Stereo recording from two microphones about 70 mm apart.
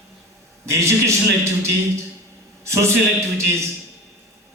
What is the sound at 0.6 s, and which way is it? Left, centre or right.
Speech, right.